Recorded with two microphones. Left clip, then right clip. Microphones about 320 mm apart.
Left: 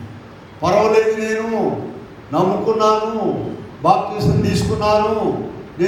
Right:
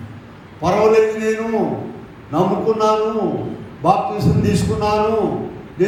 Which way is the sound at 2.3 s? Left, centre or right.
Left.